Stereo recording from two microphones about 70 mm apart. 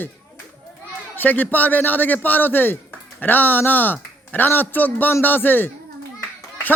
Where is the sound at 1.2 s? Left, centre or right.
Left.